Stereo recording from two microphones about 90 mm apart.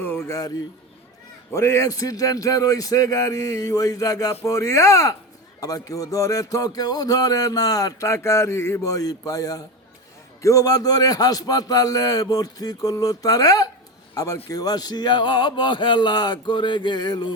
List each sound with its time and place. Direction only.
0.0 s a sound: 25° left (ahead or behind)
0.3 s music: 40° left (ahead or behind)
1.5 s music: 35° left (ahead or behind)
10.4 s a man's voice: 40° left (ahead or behind)